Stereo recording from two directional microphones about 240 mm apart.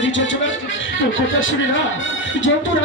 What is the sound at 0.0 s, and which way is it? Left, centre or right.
Music, left.